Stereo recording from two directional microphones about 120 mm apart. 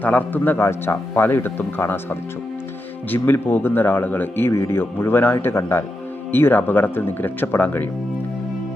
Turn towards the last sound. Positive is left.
turn(degrees=15)  # may be behind; listen again after turning